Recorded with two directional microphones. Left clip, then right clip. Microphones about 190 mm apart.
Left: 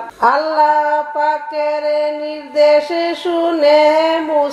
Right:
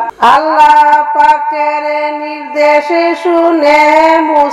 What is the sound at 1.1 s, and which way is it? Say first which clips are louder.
Music: right 9 dB; 30° right (ahead or behind).